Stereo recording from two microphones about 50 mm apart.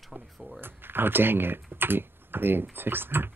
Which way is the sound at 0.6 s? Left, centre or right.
Right.